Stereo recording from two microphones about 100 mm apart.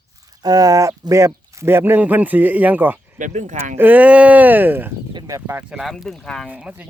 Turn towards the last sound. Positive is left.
turn(degrees=-10)  # may be behind; listen again after turning